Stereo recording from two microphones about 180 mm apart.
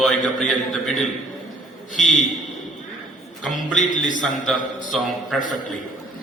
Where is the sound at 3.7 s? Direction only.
45° left (ahead or behind).